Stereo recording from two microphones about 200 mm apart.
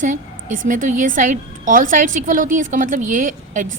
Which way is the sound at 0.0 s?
40° right (ahead or behind).